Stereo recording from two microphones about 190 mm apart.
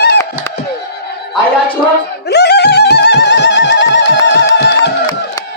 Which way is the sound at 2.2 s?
60° left (ahead or behind).